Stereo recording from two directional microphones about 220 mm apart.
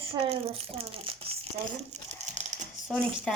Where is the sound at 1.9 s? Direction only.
30° right (ahead or behind).